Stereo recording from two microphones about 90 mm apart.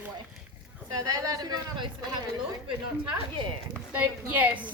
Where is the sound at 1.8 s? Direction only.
65° right (ahead or behind).